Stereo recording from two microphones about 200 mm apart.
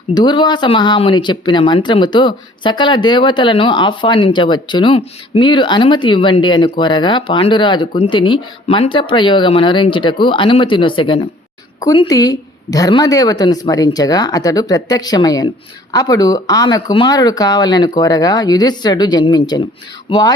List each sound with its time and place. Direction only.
0.1 s speech: 20° left (ahead or behind)